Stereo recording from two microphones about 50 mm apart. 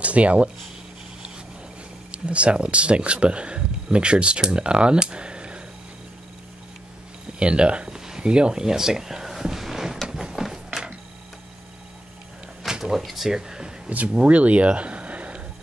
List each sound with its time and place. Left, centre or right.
0.0 s speech: right
2.0 s speech: right
7.3 s a sound: right
12.6 s a sound: centre
13.0 s speech: centre
13.8 s speech: right